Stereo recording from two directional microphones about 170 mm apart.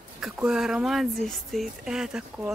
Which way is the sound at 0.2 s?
5° right (ahead or behind).